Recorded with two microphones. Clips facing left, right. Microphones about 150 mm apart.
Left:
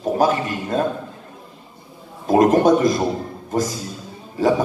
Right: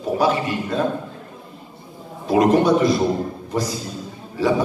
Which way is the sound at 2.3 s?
45° left (ahead or behind).